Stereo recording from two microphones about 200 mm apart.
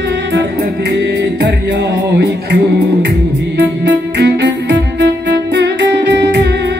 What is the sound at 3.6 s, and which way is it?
Music, 55° right (ahead or behind).